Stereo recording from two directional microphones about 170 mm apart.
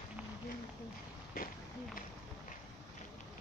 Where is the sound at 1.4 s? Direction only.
60° left (ahead or behind).